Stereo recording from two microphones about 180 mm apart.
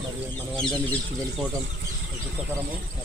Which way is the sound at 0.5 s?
5° left (ahead or behind).